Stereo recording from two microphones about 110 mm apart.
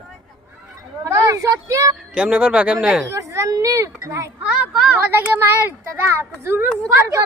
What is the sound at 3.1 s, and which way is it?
A child's voice, 30° right (ahead or behind).